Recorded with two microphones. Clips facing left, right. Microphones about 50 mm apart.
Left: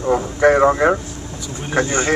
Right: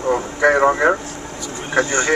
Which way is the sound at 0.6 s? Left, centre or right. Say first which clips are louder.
Left 1 dB; centre.